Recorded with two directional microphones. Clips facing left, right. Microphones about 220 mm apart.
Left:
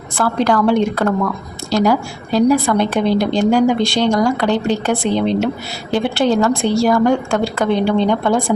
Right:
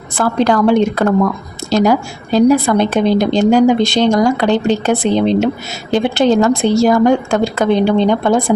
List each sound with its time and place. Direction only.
0.2 s a woman's voice: 20° right (ahead or behind)